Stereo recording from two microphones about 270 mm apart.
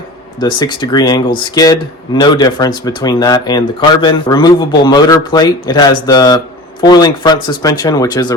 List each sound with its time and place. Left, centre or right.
0.3 s speech: centre